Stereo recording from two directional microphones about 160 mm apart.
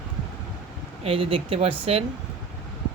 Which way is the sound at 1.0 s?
35° right (ahead or behind).